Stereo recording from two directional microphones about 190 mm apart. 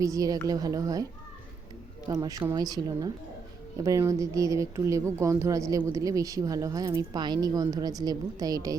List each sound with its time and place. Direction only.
0.0 s speech: 20° right (ahead or behind)
2.0 s speech: 20° right (ahead or behind)